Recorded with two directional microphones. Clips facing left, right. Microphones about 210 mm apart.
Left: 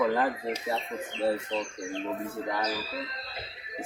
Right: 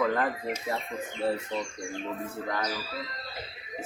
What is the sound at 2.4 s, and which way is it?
Speech, 10° left (ahead or behind).